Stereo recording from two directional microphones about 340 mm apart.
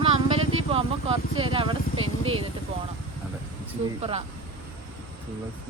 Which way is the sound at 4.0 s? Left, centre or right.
Centre.